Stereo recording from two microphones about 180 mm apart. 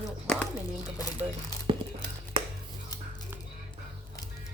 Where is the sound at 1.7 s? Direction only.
30° right (ahead or behind).